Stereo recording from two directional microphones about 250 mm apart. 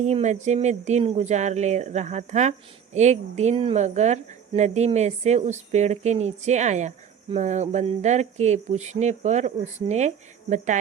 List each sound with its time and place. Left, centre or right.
0.0 s speech: right